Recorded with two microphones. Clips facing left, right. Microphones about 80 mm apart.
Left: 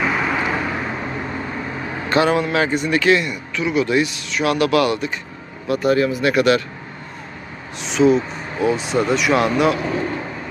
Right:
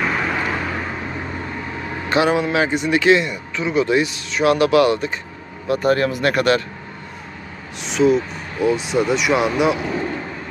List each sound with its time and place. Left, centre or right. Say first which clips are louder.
0.0 s vehicle: left 1 dB; centre
2.0 s a man's voice: even; centre; by 5.9 s right
5.9 s speech: left 2 dB; right
7.9 s speech: left 1 dB; centre